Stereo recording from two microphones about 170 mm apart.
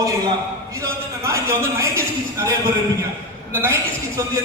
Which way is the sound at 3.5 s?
15° right (ahead or behind).